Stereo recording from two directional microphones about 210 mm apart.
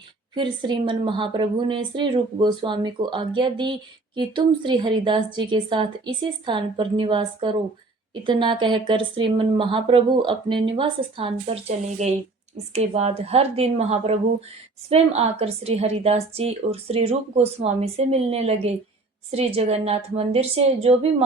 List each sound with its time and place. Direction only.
0.3 s a woman's voice: 25° right (ahead or behind)